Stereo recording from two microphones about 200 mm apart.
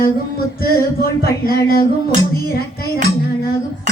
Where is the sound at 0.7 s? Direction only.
50° left (ahead or behind).